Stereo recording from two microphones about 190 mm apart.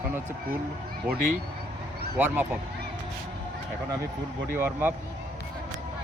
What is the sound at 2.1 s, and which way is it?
Speech, 10° right (ahead or behind).